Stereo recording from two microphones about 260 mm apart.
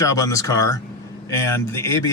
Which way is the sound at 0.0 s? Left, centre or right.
Centre.